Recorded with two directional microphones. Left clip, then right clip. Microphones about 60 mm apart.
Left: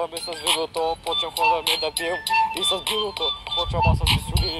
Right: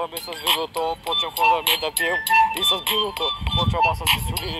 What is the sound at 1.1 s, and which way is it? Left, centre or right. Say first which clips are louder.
Speech: right 3 dB; left.